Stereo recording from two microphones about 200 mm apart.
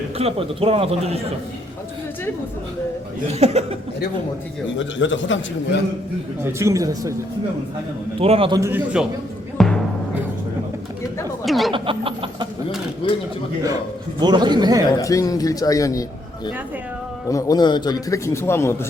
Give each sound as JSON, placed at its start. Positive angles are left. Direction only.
{"t": 0.2, "sound": "a man's voice", "side_deg": -30}
{"t": 3.2, "sound": "speech", "side_deg": -30}
{"t": 4.9, "sound": "a man's voice", "side_deg": 70}
{"t": 6.4, "sound": "speech", "side_deg": -15}
{"t": 8.2, "sound": "a man's voice", "side_deg": -30}
{"t": 9.6, "sound": "music", "side_deg": 0}
{"t": 11.4, "sound": "speech", "side_deg": 0}
{"t": 11.7, "sound": "a sound", "side_deg": -25}
{"t": 13.0, "sound": "speech", "side_deg": 25}
{"t": 14.2, "sound": "a man's voice", "side_deg": -20}
{"t": 14.9, "sound": "speech", "side_deg": 15}
{"t": 17.2, "sound": "speech", "side_deg": 15}